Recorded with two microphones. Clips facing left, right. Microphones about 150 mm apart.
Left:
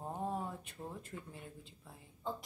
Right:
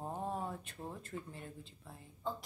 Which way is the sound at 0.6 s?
10° left (ahead or behind).